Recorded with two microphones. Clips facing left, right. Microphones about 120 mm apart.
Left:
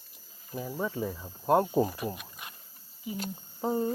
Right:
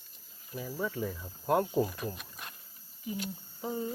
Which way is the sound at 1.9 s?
5° left (ahead or behind).